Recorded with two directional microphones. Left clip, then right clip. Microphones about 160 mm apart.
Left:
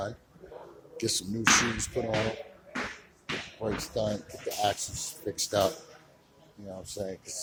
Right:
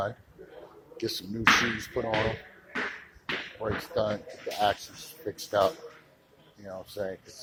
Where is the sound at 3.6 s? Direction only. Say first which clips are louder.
Right 2 dB; 25° left (ahead or behind).